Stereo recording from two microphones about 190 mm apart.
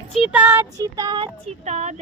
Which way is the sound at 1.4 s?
35° right (ahead or behind).